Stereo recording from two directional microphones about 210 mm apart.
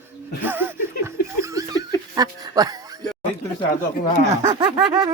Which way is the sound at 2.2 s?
20° right (ahead or behind).